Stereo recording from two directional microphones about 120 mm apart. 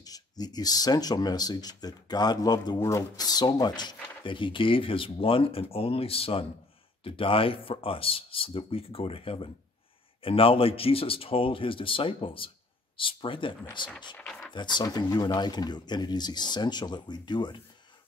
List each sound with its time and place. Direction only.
0.0 s speech: 35° left (ahead or behind)
14.1 s speech: 5° left (ahead or behind)
14.5 s speech: 40° left (ahead or behind)